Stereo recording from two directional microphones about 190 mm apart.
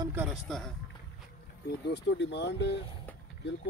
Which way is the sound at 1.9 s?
65° left (ahead or behind).